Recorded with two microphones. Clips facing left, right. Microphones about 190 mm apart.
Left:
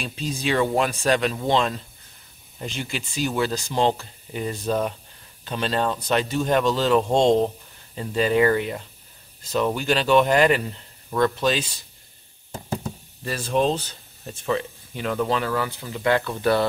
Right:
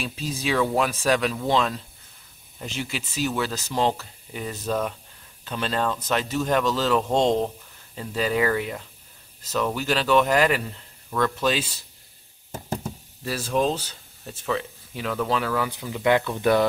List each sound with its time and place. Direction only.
0.0 s speech: 5° right (ahead or behind)
13.2 s speech: 5° right (ahead or behind)